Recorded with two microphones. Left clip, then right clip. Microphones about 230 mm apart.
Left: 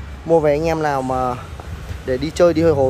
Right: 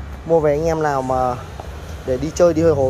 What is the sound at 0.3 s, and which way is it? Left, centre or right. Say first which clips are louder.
Speech: left 1 dB; centre.